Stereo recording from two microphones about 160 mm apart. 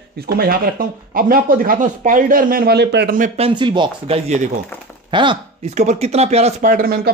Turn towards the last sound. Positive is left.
turn(degrees=-65)  # may be behind; listen again after turning